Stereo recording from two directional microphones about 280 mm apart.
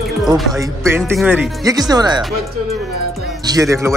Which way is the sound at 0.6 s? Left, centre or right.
Centre.